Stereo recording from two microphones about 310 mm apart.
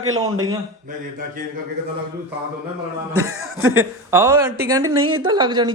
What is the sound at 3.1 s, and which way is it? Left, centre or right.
Speech, right.